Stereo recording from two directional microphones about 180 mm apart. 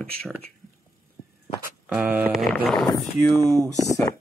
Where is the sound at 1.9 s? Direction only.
10° right (ahead or behind).